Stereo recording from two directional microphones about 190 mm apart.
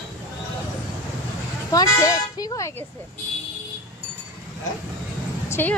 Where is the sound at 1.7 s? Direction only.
20° left (ahead or behind).